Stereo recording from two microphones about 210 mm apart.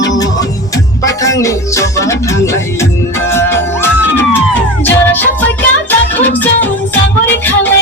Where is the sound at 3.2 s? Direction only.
10° left (ahead or behind).